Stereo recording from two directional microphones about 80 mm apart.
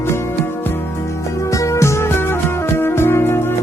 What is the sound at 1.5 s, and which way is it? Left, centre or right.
Music, left.